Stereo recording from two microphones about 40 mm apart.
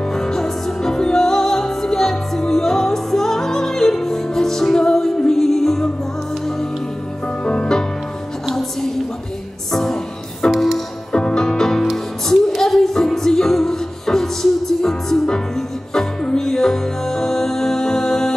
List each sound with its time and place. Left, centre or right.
0.1 s music: centre
7.4 s music: centre
8.5 s a sound: centre
9.7 s music: centre